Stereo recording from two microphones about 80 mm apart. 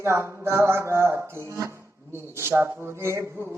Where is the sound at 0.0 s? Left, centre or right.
Right.